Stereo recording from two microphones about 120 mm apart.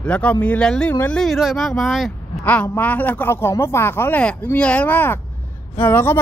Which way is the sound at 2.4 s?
15° left (ahead or behind).